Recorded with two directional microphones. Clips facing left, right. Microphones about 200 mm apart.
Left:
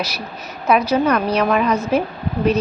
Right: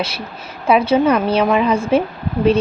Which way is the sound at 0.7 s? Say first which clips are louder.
Right 3 dB; 25° right (ahead or behind).